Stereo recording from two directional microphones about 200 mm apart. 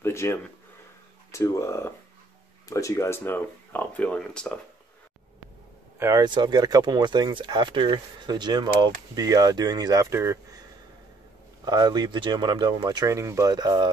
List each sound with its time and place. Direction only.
0.0 s speech: 15° left (ahead or behind)
5.9 s speech: 15° right (ahead or behind)
11.6 s speech: 20° right (ahead or behind)